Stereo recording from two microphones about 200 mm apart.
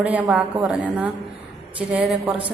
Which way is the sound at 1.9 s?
5° right (ahead or behind).